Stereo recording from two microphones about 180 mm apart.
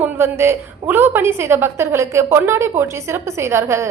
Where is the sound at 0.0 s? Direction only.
15° right (ahead or behind).